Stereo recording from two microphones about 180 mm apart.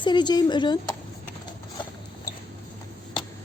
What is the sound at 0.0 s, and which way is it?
Speech, 25° left (ahead or behind).